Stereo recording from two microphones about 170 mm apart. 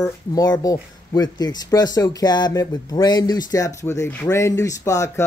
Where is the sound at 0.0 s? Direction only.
20° left (ahead or behind).